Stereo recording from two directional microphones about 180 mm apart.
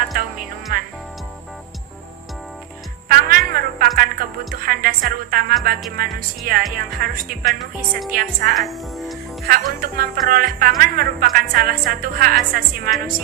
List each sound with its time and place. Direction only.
0.1 s music: 50° right (ahead or behind)
3.1 s music: 55° right (ahead or behind)
4.6 s a woman's voice: 55° right (ahead or behind)
7.4 s a woman's voice: centre (ahead or behind)
8.1 s a woman's voice: 55° right (ahead or behind)
8.5 s a woman's voice: centre (ahead or behind)
9.5 s a woman's voice: 55° right (ahead or behind)